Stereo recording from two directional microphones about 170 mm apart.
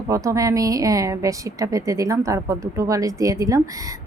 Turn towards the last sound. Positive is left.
turn(degrees=-20)  # may be behind; listen again after turning